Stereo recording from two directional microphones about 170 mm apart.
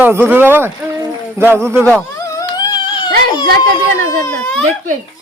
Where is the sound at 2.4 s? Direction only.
25° left (ahead or behind).